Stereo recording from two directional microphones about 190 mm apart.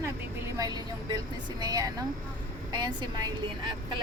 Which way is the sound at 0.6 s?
20° right (ahead or behind).